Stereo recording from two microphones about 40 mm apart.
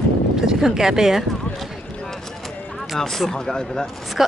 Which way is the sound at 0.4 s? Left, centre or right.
Centre.